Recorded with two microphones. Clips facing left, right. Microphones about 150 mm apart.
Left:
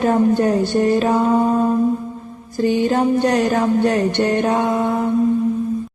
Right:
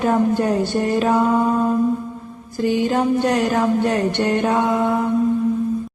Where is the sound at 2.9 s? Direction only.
40° left (ahead or behind).